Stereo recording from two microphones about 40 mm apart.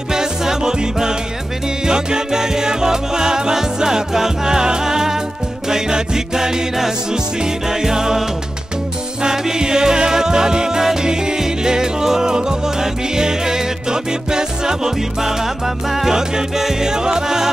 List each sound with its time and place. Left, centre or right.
0.1 s music: centre